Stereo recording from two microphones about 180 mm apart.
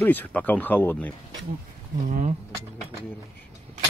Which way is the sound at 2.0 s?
45° right (ahead or behind).